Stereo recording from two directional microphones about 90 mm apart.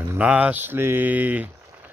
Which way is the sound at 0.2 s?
15° right (ahead or behind).